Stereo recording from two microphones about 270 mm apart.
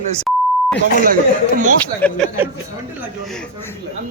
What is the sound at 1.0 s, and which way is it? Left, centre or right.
Speech, right.